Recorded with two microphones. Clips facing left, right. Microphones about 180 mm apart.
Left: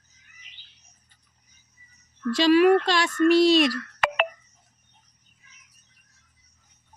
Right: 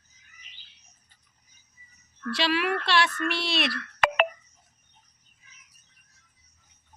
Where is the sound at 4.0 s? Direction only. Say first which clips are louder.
Right 4 dB; 55° right (ahead or behind).